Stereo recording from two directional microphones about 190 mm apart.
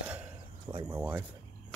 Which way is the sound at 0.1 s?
10° right (ahead or behind).